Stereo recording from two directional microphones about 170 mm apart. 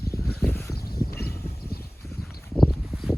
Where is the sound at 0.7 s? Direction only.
60° left (ahead or behind).